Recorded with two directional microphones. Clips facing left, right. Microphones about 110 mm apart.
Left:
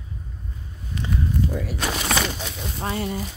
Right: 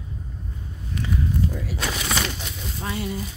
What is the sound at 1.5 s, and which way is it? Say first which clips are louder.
Speech: left 2 dB; 55° left (ahead or behind).